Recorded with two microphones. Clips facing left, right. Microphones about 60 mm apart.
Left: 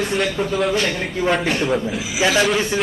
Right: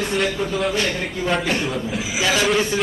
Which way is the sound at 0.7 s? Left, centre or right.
Left.